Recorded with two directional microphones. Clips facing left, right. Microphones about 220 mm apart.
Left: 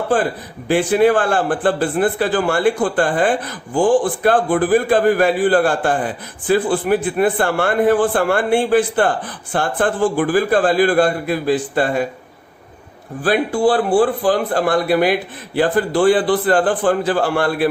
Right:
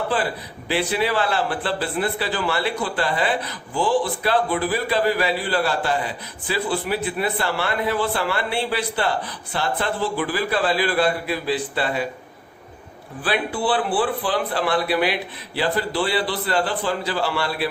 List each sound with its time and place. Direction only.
0.1 s a man's voice: 50° left (ahead or behind)
13.2 s a man's voice: 45° left (ahead or behind)